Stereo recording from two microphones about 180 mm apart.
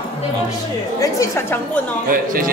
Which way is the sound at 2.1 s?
50° right (ahead or behind).